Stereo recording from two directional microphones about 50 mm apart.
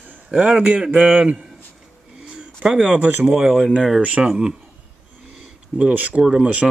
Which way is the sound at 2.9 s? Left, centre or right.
Right.